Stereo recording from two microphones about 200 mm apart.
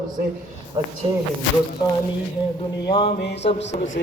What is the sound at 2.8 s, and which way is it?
Mantra, 25° left (ahead or behind).